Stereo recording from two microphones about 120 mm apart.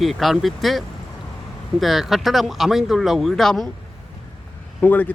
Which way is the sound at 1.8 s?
Centre (ahead or behind).